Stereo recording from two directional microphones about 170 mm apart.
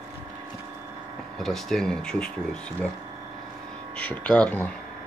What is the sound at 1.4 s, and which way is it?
Speech, centre (ahead or behind).